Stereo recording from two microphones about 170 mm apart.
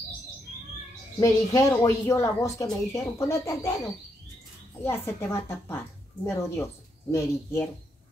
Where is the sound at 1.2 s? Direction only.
20° left (ahead or behind).